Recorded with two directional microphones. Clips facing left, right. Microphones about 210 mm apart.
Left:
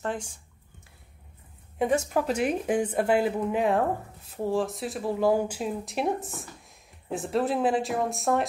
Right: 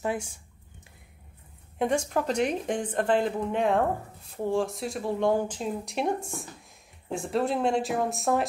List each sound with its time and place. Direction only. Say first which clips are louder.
0.0 s speech: right 2 dB; 10° right (ahead or behind)
1.8 s a woman's voice: left 1 dB; 5° left (ahead or behind)